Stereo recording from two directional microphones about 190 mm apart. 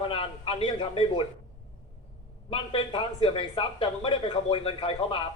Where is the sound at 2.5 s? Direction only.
25° left (ahead or behind).